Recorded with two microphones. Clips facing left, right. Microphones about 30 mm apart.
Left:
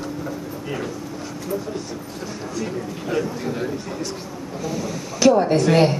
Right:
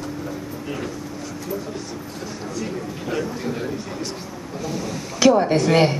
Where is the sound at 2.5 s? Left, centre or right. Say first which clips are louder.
Left 2 dB; centre.